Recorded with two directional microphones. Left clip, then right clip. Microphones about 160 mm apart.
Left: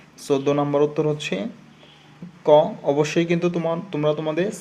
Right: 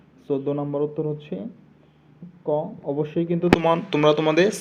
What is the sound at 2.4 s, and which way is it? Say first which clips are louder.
Speech: left 10 dB; 90° left.